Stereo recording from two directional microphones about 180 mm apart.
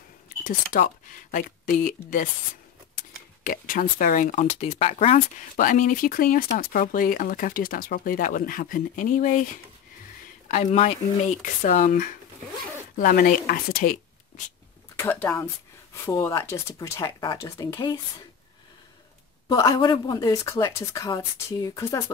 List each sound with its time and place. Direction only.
0.7 s speech: 45° left (ahead or behind)
3.4 s speech: 50° left (ahead or behind)
10.5 s speech: 40° left (ahead or behind)
15.0 s speech: 15° left (ahead or behind)
19.5 s speech: 20° left (ahead or behind)